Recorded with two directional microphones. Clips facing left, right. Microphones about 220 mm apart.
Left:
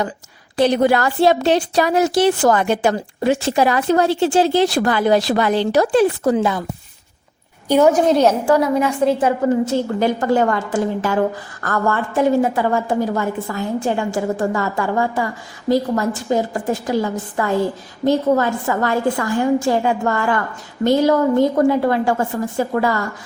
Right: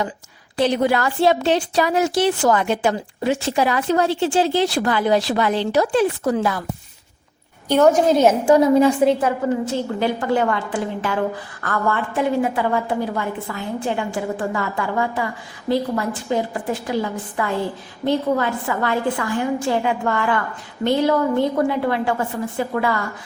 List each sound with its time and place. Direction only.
0.5 s a woman's voice: 45° left (ahead or behind)
6.3 s speech: 20° left (ahead or behind)
7.7 s a woman's voice: 5° left (ahead or behind)
8.4 s a woman's voice: 20° right (ahead or behind)
10.0 s a woman's voice: 45° left (ahead or behind)